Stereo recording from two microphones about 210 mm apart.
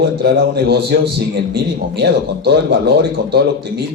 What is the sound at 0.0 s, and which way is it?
A man's voice, 50° right (ahead or behind).